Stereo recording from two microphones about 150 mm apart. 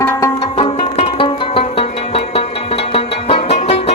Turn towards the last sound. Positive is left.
turn(degrees=40)  # may be behind; listen again after turning